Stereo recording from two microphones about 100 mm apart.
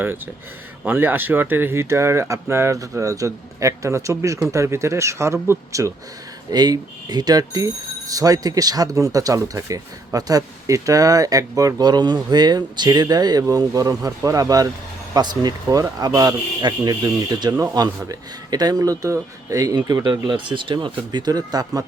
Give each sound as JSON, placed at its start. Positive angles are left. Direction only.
{"t": 0.9, "sound": "speech", "side_deg": -20}
{"t": 6.5, "sound": "speech", "side_deg": -40}